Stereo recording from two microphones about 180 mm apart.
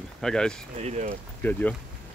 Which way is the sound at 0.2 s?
5° left (ahead or behind).